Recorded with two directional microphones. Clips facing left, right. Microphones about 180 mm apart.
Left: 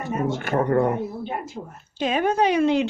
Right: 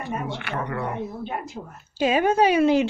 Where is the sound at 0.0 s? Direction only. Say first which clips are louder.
Left 5 dB; 45° left (ahead or behind).